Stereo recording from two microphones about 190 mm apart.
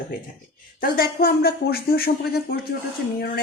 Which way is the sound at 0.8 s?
55° left (ahead or behind).